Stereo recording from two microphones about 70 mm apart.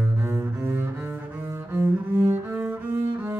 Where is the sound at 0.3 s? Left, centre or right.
Right.